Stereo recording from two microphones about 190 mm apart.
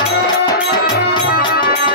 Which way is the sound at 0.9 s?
55° left (ahead or behind).